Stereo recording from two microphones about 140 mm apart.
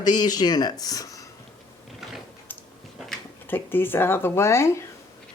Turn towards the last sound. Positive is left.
turn(degrees=20)  # may be behind; listen again after turning